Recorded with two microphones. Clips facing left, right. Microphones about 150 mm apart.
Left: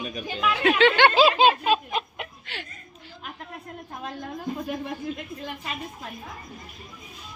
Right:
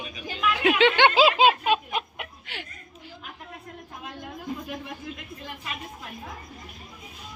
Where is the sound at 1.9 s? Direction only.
10° right (ahead or behind).